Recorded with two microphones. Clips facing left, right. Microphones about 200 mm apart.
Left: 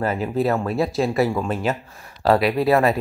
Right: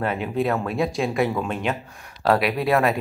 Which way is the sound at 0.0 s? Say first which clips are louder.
Left 2 dB; centre (ahead or behind).